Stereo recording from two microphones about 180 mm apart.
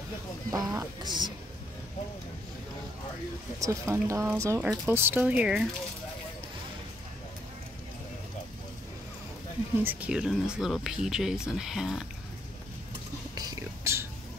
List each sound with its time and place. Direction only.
0.5 s speech: 20° right (ahead or behind)
3.5 s speech: 15° right (ahead or behind)
9.8 s speech: 5° right (ahead or behind)
13.3 s whispering: 20° right (ahead or behind)